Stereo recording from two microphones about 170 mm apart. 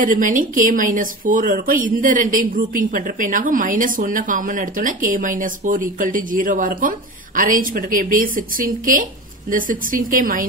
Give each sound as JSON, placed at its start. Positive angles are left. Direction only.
{"t": 0.0, "sound": "speech", "side_deg": -50}